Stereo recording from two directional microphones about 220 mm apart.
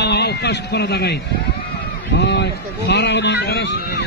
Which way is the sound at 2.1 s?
50° left (ahead or behind).